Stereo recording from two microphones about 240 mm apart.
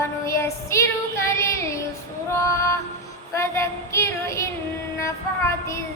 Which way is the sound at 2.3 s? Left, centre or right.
Centre.